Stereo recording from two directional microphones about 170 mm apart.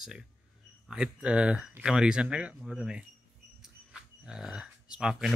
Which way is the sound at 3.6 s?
5° right (ahead or behind).